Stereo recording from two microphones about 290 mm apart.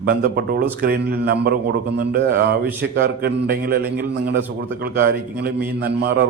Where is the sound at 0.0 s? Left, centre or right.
Right.